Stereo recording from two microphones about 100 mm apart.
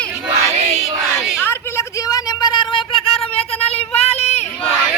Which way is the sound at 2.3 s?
45° left (ahead or behind).